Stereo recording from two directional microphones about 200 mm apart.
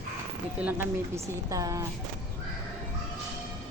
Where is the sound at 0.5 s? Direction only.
10° right (ahead or behind).